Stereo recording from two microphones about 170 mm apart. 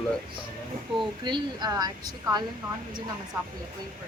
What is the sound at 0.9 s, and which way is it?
Speech, 25° right (ahead or behind).